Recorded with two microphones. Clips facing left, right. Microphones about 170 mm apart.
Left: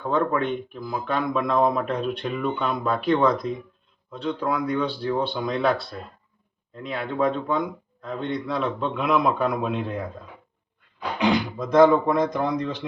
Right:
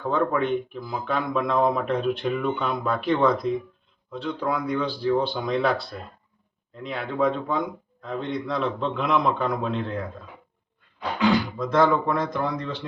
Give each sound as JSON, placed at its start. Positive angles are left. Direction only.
{"t": 0.0, "sound": "speech", "side_deg": 0}
{"t": 6.8, "sound": "speech", "side_deg": 0}
{"t": 11.2, "sound": "speech", "side_deg": 20}